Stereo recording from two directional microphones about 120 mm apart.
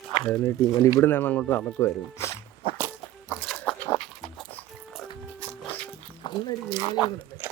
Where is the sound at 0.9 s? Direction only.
15° left (ahead or behind).